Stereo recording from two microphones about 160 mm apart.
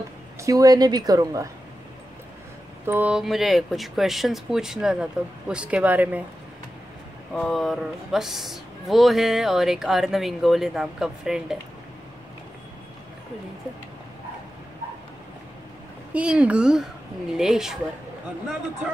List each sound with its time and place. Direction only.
0.4 s a woman's voice: 20° right (ahead or behind)
2.9 s a woman's voice: 10° right (ahead or behind)
7.3 s speech: centre (ahead or behind)
16.1 s a woman's voice: 5° right (ahead or behind)